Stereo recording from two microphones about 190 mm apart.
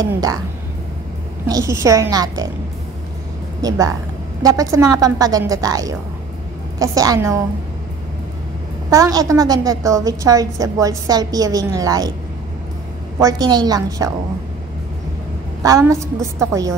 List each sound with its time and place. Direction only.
0.0 s a woman's voice: 20° right (ahead or behind)
1.5 s a woman's voice: 15° right (ahead or behind)
3.6 s a woman's voice: 20° right (ahead or behind)
8.9 s a woman's voice: 20° right (ahead or behind)
13.2 s a woman's voice: 20° right (ahead or behind)
15.6 s a woman's voice: 15° right (ahead or behind)